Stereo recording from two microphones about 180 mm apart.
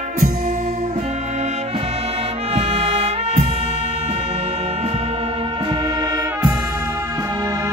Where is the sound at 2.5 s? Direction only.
35° right (ahead or behind).